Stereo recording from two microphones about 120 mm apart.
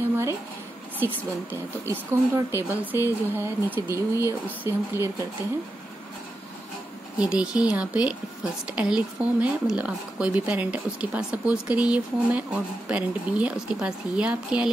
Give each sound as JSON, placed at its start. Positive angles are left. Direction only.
{"t": 0.9, "sound": "speech", "side_deg": -15}
{"t": 7.2, "sound": "speech", "side_deg": -10}